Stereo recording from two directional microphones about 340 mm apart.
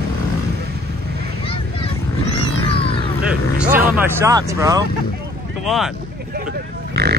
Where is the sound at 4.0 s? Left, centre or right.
Centre.